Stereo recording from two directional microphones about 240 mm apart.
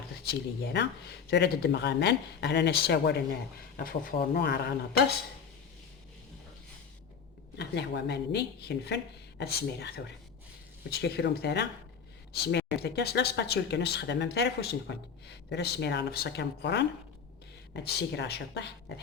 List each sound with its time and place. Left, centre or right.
0.3 s speech: left
7.5 s speech: left
11.0 s speech: left
17.8 s speech: left